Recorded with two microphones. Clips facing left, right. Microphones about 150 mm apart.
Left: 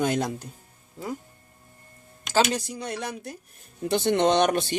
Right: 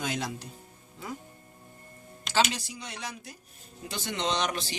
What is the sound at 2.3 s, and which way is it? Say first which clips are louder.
Speech: left 4 dB; 50° left (ahead or behind).